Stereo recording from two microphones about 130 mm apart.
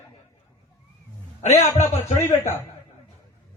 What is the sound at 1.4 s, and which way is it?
Speech, 60° left (ahead or behind).